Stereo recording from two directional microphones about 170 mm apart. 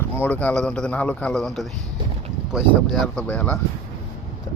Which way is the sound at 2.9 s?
Centre (ahead or behind).